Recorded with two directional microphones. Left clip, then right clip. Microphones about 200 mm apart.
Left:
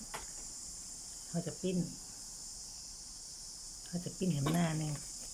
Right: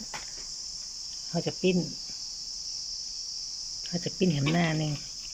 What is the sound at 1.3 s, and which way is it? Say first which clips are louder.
Speech: right 11 dB; 10° right (ahead or behind).